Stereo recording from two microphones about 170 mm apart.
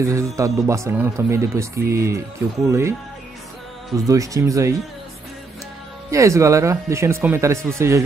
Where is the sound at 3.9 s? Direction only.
20° right (ahead or behind).